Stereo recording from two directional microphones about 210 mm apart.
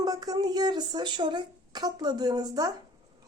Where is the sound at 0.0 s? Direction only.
20° right (ahead or behind).